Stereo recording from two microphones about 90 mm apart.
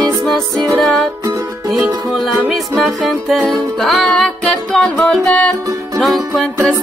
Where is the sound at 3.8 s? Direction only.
5° left (ahead or behind).